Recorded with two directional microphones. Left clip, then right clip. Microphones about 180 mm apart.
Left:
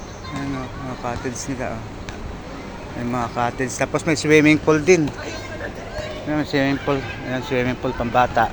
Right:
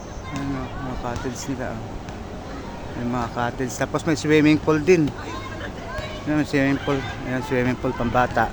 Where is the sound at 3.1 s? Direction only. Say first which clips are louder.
Left 3 dB; centre (ahead or behind).